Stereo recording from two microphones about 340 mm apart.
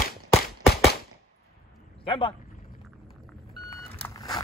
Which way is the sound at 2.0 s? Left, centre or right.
Centre.